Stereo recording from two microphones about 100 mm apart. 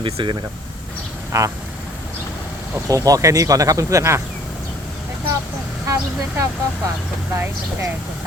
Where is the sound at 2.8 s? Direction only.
35° right (ahead or behind).